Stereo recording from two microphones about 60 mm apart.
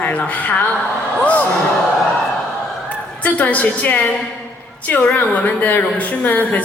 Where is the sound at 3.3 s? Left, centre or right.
Left.